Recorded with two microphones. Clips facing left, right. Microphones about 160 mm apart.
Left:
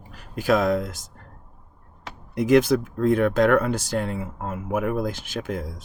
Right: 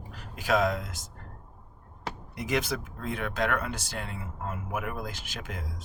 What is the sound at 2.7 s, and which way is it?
Speech, 40° left (ahead or behind).